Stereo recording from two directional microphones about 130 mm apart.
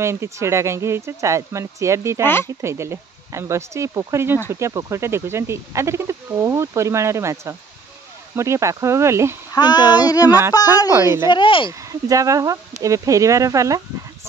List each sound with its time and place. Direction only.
0.0 s speech: 20° right (ahead or behind)
2.2 s speech: 20° left (ahead or behind)
2.6 s speech: 20° right (ahead or behind)
9.5 s a child's voice: 35° left (ahead or behind)
10.9 s speech: 20° right (ahead or behind)
11.2 s speech: 40° left (ahead or behind)
11.9 s speech: 25° right (ahead or behind)